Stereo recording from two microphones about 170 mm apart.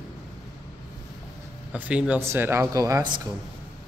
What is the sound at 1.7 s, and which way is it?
Speech, 5° right (ahead or behind).